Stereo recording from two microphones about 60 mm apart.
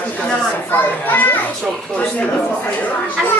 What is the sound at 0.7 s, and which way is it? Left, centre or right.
Speech, left.